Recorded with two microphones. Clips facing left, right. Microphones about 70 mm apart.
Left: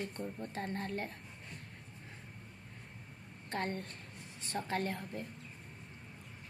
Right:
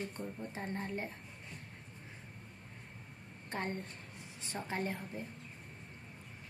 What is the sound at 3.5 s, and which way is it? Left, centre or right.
A woman's voice, centre.